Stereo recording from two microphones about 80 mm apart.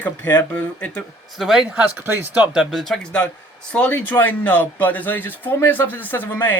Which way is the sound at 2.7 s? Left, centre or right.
Centre.